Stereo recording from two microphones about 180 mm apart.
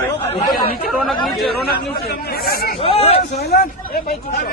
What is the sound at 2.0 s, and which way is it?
Speech, 60° left (ahead or behind).